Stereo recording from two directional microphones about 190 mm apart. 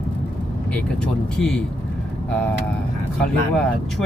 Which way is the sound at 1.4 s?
5° left (ahead or behind).